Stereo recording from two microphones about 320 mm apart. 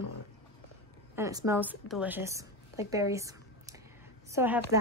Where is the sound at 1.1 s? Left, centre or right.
Centre.